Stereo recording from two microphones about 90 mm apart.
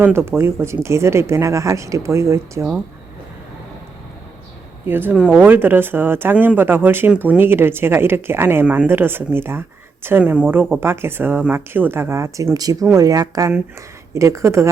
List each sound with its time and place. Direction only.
0.0 s speech: 25° right (ahead or behind)
4.9 s speech: 25° right (ahead or behind)
8.6 s speech: 15° right (ahead or behind)
8.9 s speech: 25° right (ahead or behind)
12.5 s speech: 40° right (ahead or behind)